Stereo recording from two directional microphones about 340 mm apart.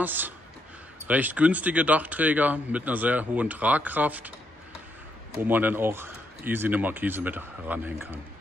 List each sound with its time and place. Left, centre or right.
0.0 s speech: centre
5.4 s speech: centre